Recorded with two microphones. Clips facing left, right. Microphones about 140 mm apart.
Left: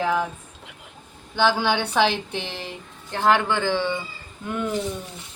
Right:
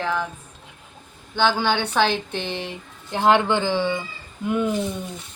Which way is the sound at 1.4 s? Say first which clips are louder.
Even; 5° left (ahead or behind).